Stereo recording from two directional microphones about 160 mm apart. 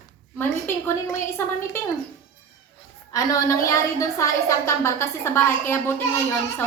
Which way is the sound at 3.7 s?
20° left (ahead or behind).